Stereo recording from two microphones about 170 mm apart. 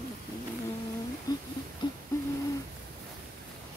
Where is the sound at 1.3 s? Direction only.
25° left (ahead or behind).